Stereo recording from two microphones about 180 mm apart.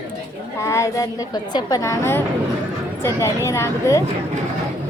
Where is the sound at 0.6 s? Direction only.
15° left (ahead or behind).